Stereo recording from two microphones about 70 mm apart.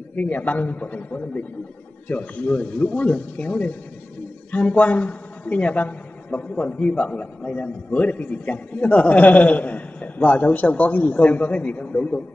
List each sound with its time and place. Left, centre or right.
0.1 s a man's voice: left